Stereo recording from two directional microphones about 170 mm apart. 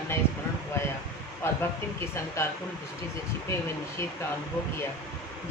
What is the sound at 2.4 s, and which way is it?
Speech, 15° left (ahead or behind).